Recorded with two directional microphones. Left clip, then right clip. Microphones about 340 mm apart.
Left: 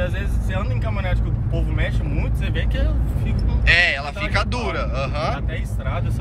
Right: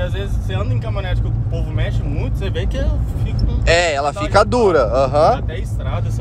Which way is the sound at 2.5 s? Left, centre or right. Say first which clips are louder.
Right 3 dB; right.